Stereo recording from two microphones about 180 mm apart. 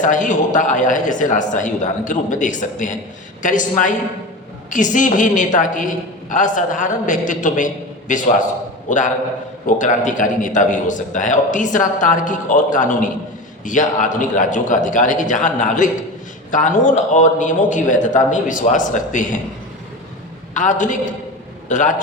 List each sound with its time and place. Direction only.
0.0 s a man's voice: 45° left (ahead or behind)
20.5 s a man's voice: 45° left (ahead or behind)